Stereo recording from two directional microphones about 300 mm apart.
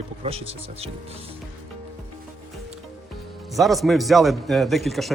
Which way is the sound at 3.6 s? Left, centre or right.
Centre.